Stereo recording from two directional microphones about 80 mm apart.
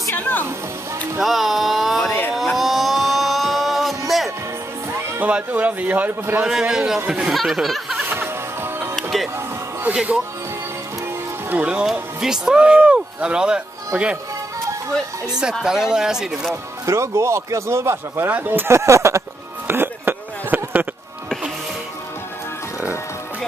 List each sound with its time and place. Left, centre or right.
0.1 s music: left
1.2 s a sound: centre
5.2 s a man's voice: centre
6.4 s speech: centre
8.1 s music: right
8.9 s music: centre
11.5 s speech: centre
15.6 s speech: centre
16.8 s speech: right
19.7 s a sound: right